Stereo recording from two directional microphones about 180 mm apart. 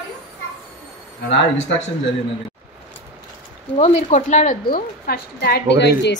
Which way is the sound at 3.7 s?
40° left (ahead or behind).